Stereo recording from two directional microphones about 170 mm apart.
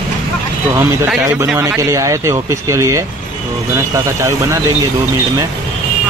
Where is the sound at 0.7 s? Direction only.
15° right (ahead or behind).